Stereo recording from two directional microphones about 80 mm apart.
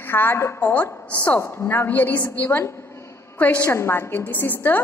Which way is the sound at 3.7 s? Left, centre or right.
Left.